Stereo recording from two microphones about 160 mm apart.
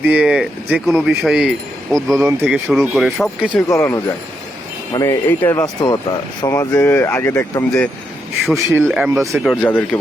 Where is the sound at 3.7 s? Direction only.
15° left (ahead or behind).